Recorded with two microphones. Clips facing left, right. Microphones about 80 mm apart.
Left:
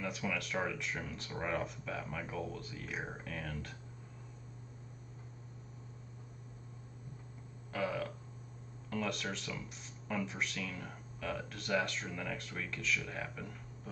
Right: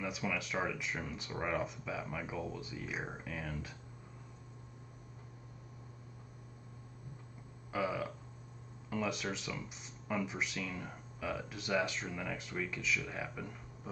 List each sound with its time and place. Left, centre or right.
0.0 s speech: centre
7.7 s burping: centre
8.9 s speech: centre